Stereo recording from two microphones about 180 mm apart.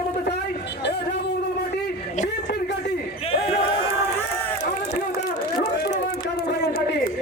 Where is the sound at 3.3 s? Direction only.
35° left (ahead or behind).